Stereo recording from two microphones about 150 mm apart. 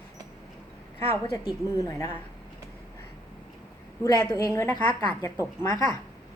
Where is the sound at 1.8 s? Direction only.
20° left (ahead or behind).